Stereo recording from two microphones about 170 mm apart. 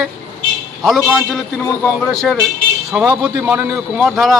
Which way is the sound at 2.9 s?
5° right (ahead or behind).